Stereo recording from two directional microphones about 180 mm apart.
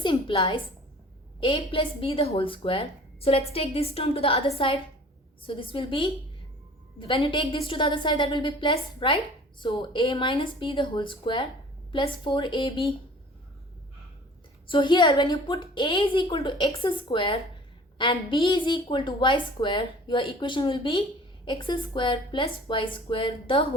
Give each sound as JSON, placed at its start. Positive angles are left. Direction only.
{"t": 0.0, "sound": "a woman's voice", "side_deg": 30}
{"t": 14.7, "sound": "a woman's voice", "side_deg": 25}